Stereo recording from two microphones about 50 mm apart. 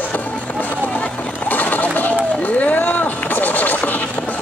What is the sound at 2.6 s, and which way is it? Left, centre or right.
Scratch, left.